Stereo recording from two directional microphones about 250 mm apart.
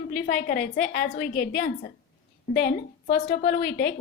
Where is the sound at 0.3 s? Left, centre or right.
Left.